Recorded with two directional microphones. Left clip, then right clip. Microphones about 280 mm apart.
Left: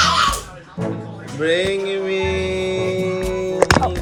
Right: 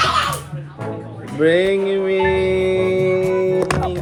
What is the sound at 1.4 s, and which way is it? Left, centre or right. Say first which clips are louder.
Music: right 3 dB; centre.